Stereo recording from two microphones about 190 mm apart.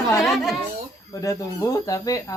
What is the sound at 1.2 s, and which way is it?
Speech, 15° left (ahead or behind).